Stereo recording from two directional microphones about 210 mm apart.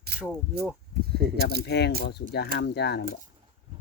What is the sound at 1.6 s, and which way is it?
Speech, 55° left (ahead or behind).